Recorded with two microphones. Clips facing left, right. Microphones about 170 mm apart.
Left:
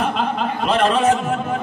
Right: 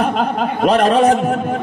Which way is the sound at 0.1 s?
45° right (ahead or behind).